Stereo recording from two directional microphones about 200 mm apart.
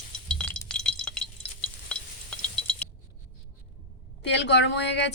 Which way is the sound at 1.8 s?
5° left (ahead or behind).